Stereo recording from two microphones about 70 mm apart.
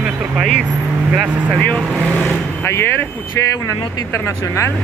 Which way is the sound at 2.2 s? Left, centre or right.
Left.